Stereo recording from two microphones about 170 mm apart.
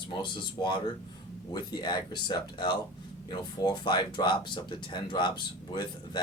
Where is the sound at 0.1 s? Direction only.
30° left (ahead or behind).